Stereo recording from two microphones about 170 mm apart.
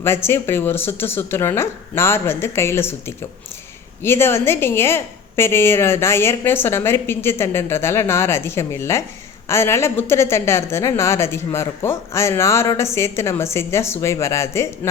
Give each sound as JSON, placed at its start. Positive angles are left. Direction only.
{"t": 0.0, "sound": "a woman's voice", "side_deg": 15}